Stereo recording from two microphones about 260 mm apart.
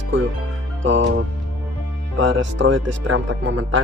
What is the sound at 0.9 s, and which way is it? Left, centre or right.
Speech, right.